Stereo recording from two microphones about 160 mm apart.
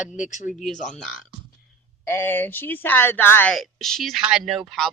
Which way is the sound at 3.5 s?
Centre (ahead or behind).